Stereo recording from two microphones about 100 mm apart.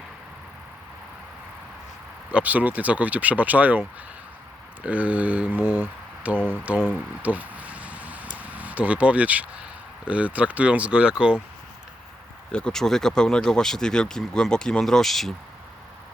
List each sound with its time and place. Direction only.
2.3 s speech: 15° right (ahead or behind)
12.5 s speech: 10° left (ahead or behind)